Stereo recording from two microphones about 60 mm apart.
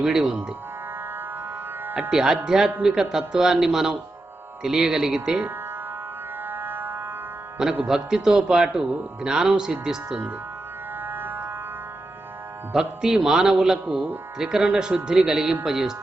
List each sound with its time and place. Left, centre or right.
0.0 s speech: centre
2.0 s speech: centre
6.5 s music: right
7.9 s speech: centre
11.0 s a sound: right
12.7 s speech: centre
13.8 s speech: right
14.3 s speech: centre